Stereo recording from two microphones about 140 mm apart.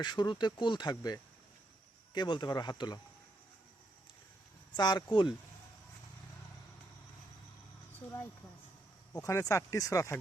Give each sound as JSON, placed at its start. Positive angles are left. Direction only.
{"t": 0.0, "sound": "speech", "side_deg": 35}
{"t": 4.8, "sound": "speech", "side_deg": 30}
{"t": 9.2, "sound": "speech", "side_deg": 20}